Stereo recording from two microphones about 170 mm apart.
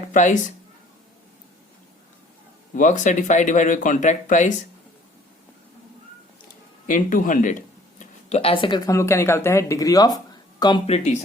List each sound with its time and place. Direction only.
0.1 s speech: 45° left (ahead or behind)
2.7 s speech: 45° left (ahead or behind)
6.8 s a sound: 55° left (ahead or behind)
8.4 s speech: 30° left (ahead or behind)
10.8 s speech: 40° left (ahead or behind)